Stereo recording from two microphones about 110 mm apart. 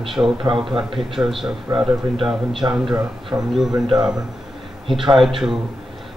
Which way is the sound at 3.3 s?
35° right (ahead or behind).